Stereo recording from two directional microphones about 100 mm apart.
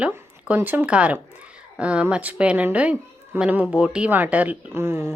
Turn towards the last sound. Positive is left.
turn(degrees=-25)  # may be behind; listen again after turning